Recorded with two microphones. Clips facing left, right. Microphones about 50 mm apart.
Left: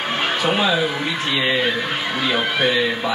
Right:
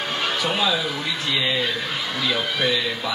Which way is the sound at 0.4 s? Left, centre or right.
Left.